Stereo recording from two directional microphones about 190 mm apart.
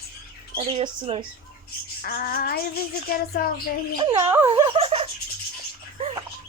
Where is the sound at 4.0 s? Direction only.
20° right (ahead or behind).